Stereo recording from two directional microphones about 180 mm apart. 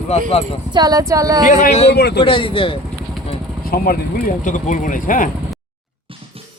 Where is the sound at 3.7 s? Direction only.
55° left (ahead or behind).